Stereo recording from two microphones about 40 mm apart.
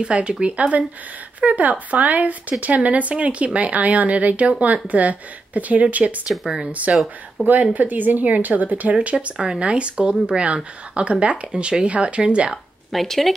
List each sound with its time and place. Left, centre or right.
0.0 s speech: right
6.3 s speech: centre
6.7 s a woman's voice: right
12.9 s speech: centre